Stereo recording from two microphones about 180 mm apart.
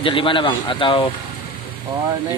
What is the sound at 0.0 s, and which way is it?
Speech, 30° left (ahead or behind).